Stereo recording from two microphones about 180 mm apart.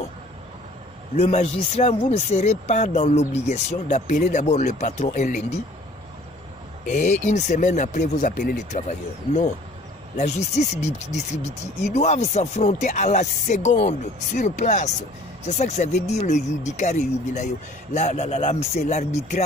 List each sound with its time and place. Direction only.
1.2 s speech: 35° left (ahead or behind)
6.9 s speech: 40° left (ahead or behind)